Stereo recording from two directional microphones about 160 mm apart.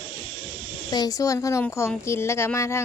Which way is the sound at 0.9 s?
25° left (ahead or behind).